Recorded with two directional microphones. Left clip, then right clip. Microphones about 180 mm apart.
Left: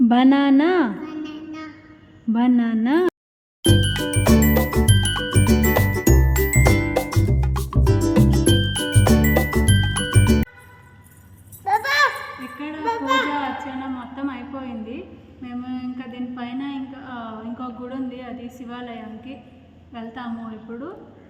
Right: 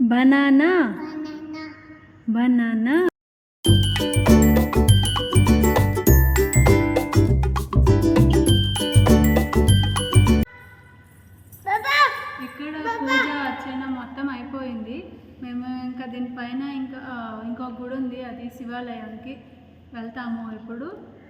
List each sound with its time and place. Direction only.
0.1 s a woman's voice: centre (ahead or behind)
1.3 s music: 10° left (ahead or behind)
2.3 s a woman's voice: centre (ahead or behind)
3.6 s music: 5° right (ahead or behind)
11.6 s a sound: 20° left (ahead or behind)
14.2 s a woman's voice: 5° left (ahead or behind)
15.4 s a sound: 10° left (ahead or behind)